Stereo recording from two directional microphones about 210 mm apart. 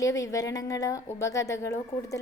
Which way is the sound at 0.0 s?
15° left (ahead or behind).